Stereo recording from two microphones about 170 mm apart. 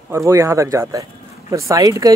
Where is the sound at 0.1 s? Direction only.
15° right (ahead or behind).